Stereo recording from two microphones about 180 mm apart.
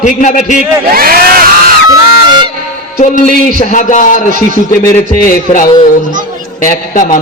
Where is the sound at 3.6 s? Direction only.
45° left (ahead or behind).